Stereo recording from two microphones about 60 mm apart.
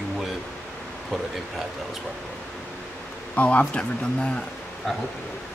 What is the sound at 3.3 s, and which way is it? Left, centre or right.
Speech, left.